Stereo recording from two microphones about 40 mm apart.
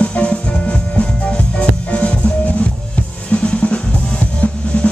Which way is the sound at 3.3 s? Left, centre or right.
Left.